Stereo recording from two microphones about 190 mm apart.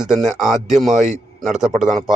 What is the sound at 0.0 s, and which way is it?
Speech, 5° right (ahead or behind).